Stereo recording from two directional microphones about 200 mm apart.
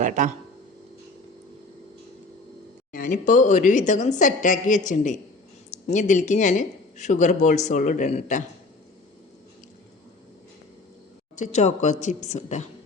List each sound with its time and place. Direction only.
0.0 s speech: 40° right (ahead or behind)
2.9 s speech: 40° left (ahead or behind)
11.3 s speech: 35° left (ahead or behind)